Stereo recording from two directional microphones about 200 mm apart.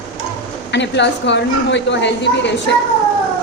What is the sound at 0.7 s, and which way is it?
A woman's voice, 60° left (ahead or behind).